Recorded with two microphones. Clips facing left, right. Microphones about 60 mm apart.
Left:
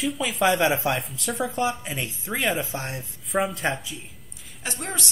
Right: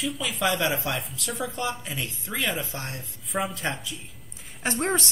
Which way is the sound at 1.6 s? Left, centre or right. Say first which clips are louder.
Left 4 dB; left.